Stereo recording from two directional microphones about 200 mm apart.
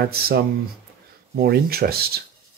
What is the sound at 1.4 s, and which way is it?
Speech, 50° right (ahead or behind).